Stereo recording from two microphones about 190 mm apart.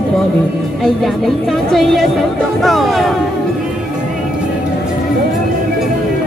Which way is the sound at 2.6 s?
Centre (ahead or behind).